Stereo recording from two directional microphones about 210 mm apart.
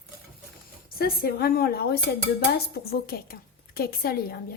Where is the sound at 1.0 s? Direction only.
45° left (ahead or behind).